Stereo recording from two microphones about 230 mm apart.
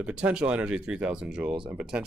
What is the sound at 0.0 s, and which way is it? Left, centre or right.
Speech, centre.